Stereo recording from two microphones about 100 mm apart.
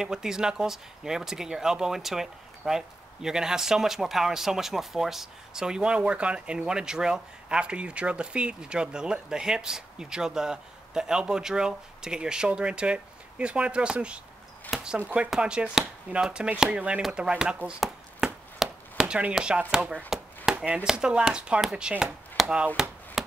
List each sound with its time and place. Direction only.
0.0 s speech: 5° right (ahead or behind)
17.7 s chopping: 5° right (ahead or behind)
19.7 s speech: 5° right (ahead or behind)
23.2 s a sound: 5° right (ahead or behind)